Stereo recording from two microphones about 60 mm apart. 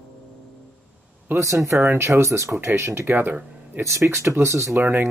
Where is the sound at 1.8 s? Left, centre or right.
Right.